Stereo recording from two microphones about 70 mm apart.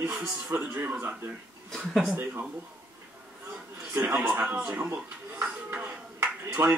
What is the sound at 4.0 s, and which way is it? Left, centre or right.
Speech, right.